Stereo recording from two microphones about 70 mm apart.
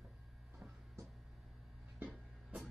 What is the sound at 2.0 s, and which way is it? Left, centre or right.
Music, right.